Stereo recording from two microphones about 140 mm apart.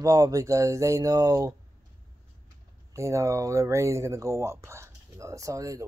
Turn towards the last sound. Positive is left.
turn(degrees=-25)  # may be behind; listen again after turning